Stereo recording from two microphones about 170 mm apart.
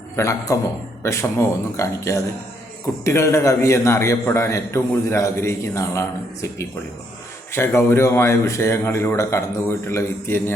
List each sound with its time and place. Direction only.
0.2 s a man's voice: 20° left (ahead or behind)